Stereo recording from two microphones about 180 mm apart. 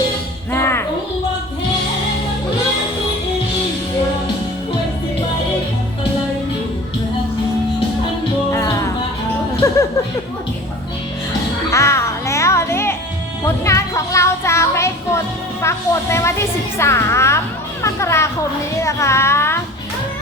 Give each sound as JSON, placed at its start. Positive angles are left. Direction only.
{"t": 0.5, "sound": "music", "side_deg": 15}
{"t": 8.5, "sound": "music", "side_deg": 15}
{"t": 9.6, "sound": "a sound", "side_deg": 15}
{"t": 11.7, "sound": "music", "side_deg": 15}
{"t": 15.6, "sound": "a woman's voice", "side_deg": 15}